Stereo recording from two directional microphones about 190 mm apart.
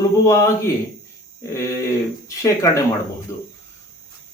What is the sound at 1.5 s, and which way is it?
Speech, 15° left (ahead or behind).